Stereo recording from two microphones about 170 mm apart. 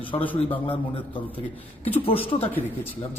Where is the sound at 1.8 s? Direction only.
35° left (ahead or behind).